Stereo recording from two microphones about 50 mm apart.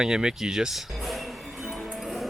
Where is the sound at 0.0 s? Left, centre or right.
Centre.